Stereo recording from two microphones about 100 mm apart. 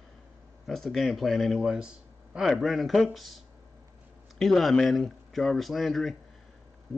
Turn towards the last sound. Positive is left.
turn(degrees=0)  # may be behind; listen again after turning